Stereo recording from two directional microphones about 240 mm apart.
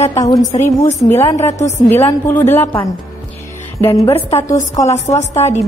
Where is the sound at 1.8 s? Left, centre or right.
Centre.